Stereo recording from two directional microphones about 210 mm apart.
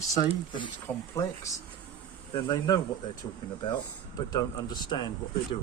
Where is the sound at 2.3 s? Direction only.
25° left (ahead or behind).